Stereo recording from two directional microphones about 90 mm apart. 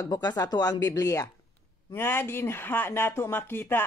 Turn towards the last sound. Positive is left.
turn(degrees=25)  # may be behind; listen again after turning